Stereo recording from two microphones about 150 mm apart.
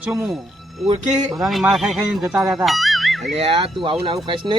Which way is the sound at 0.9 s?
55° right (ahead or behind).